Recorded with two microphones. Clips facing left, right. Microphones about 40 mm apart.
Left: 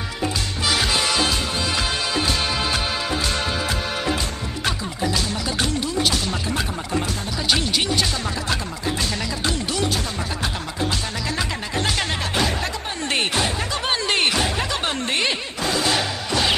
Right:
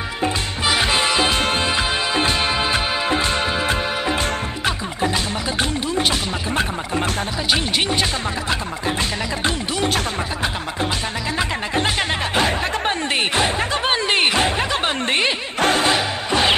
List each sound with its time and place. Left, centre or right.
0.2 s music: right
1.3 s music: right
5.0 s music: right
7.5 s speech: right
11.3 s music: right
13.3 s a sound: right
15.6 s music: right
16.3 s music: right